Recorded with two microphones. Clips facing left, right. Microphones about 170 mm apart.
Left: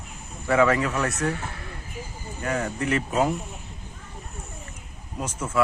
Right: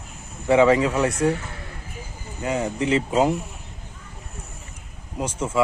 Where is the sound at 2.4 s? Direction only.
15° right (ahead or behind).